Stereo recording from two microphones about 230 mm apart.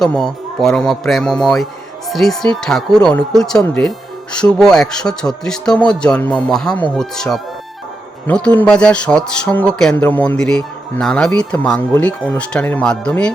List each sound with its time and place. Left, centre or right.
0.0 s speech: centre